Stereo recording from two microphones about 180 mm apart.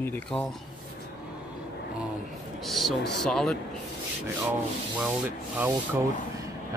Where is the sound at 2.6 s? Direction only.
Centre (ahead or behind).